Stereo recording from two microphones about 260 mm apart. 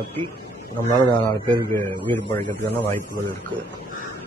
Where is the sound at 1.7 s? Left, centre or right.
Centre.